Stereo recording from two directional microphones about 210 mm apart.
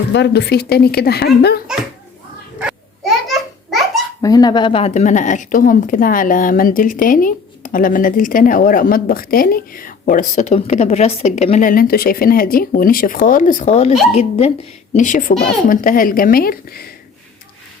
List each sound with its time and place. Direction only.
0.1 s speech: 55° left (ahead or behind)
2.6 s dog: centre (ahead or behind)
4.2 s a woman's voice: 15° left (ahead or behind); by 16.8 s 45° left (ahead or behind)